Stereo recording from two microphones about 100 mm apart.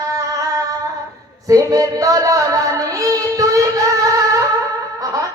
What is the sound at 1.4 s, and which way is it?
Music, 35° right (ahead or behind).